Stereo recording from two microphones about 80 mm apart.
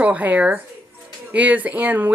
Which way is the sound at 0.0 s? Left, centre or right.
Centre.